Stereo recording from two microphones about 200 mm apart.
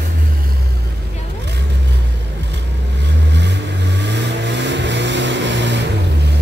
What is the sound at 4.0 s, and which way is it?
Vehicle, 60° right (ahead or behind).